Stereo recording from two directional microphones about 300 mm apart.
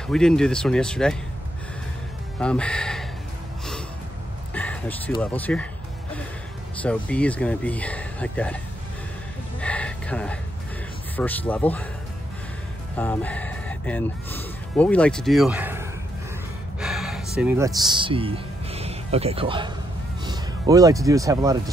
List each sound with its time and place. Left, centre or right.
0.1 s speech: centre
2.3 s speech: centre
4.6 s a sound: centre
5.2 s speech: centre
6.8 s speech: centre
9.6 s a sound: centre
11.1 s speech: centre
12.9 s speech: centre
16.8 s gasp: centre
17.4 s speech: centre